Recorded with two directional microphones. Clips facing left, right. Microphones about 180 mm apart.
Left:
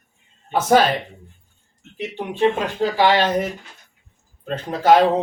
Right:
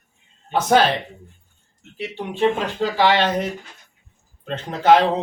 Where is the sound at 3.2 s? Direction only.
10° left (ahead or behind).